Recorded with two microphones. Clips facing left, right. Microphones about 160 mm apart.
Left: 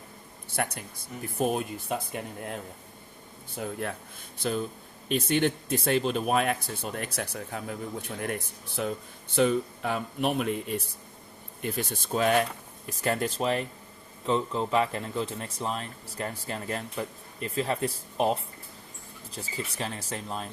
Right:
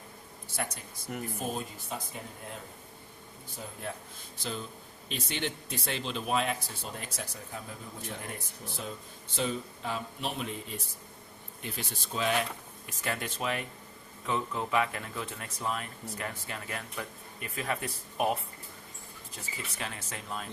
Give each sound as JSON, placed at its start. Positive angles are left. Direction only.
{"t": 0.5, "sound": "speech", "side_deg": 60}
{"t": 3.6, "sound": "speech", "side_deg": 65}
{"t": 4.4, "sound": "speech", "side_deg": 55}
{"t": 11.6, "sound": "speech", "side_deg": 50}
{"t": 12.9, "sound": "speech", "side_deg": 40}